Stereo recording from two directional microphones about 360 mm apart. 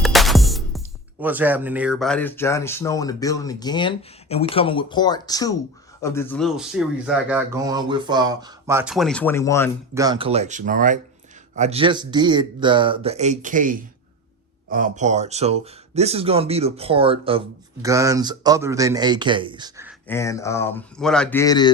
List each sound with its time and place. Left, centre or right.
0.0 s music: centre
1.2 s speech: centre
9.9 s speech: centre
20.1 s speech: centre